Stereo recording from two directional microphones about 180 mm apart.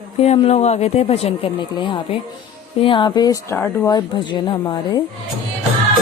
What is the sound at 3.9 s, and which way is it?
Speech, 20° left (ahead or behind).